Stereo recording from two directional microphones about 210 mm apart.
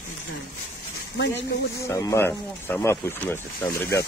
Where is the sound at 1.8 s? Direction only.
15° left (ahead or behind).